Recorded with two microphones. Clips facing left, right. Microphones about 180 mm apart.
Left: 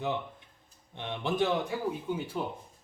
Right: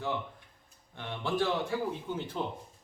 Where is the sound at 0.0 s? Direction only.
20° left (ahead or behind).